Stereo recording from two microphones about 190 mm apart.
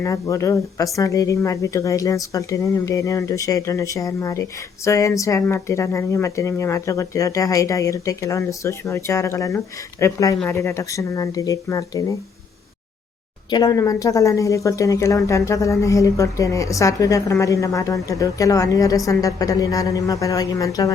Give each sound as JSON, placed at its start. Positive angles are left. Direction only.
{"t": 0.0, "sound": "a woman's voice", "side_deg": 15}
{"t": 13.5, "sound": "a woman's voice", "side_deg": 20}